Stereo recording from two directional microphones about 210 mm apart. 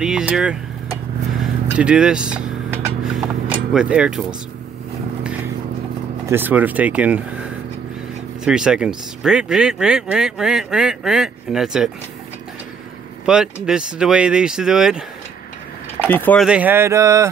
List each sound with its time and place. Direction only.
0.0 s speech: 5° right (ahead or behind)
1.8 s speech: 5° right (ahead or behind)
6.2 s speech: 10° right (ahead or behind)
13.2 s speech: 5° right (ahead or behind)
16.1 s speech: 10° left (ahead or behind)
16.4 s a sound: 5° right (ahead or behind)